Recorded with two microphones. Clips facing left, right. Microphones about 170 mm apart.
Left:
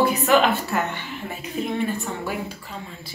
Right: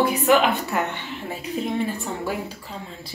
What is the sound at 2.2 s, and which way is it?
Speech, 30° right (ahead or behind).